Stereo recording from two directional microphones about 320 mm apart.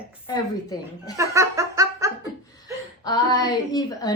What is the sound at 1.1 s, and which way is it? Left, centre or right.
Laughter, centre.